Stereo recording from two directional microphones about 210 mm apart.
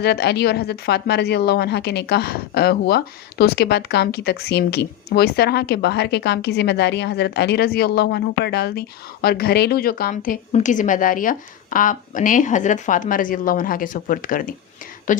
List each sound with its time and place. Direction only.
0.0 s a woman's voice: 50° left (ahead or behind)